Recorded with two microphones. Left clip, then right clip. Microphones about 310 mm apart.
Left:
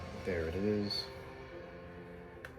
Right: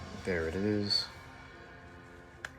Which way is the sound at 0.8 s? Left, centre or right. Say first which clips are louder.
Right 7 dB; right.